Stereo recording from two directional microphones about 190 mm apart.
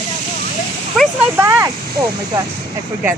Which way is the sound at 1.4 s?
15° right (ahead or behind).